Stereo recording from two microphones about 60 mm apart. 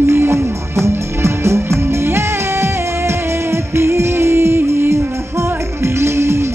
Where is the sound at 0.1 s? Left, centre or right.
Right.